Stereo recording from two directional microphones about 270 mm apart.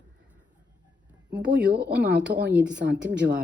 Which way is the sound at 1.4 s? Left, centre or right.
Right.